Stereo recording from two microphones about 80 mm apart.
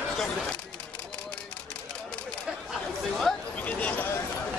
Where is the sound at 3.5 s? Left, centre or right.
Centre.